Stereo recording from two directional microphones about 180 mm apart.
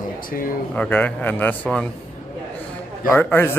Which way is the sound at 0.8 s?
10° left (ahead or behind).